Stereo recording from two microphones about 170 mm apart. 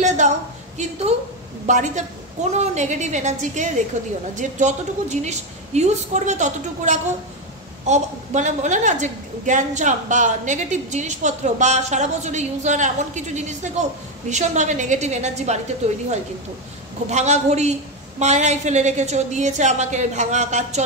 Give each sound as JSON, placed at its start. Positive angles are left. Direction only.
{"t": 0.0, "sound": "a sound", "side_deg": -45}
{"t": 1.7, "sound": "a woman's voice", "side_deg": -45}
{"t": 17.1, "sound": "a woman's voice", "side_deg": -40}